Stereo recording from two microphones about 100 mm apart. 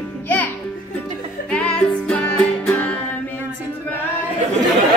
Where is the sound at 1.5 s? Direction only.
15° left (ahead or behind).